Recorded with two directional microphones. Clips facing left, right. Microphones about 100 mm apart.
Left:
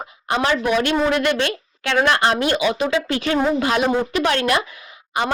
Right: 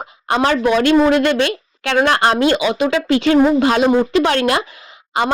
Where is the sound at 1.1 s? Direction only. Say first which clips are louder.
Right 5 dB; 25° right (ahead or behind).